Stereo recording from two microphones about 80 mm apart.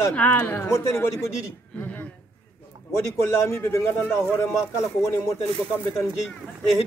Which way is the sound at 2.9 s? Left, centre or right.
Left.